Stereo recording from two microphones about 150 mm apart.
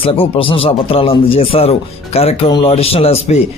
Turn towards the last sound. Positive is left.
turn(degrees=40)  # may be behind; listen again after turning